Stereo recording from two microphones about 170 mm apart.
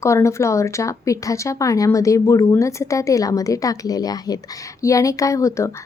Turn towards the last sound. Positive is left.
turn(degrees=15)  # may be behind; listen again after turning